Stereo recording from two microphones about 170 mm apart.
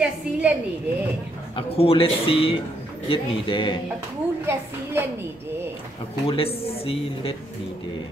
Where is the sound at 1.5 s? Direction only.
35° left (ahead or behind).